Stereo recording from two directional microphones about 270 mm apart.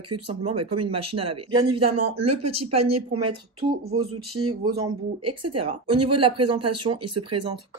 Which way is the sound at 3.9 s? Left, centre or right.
Right.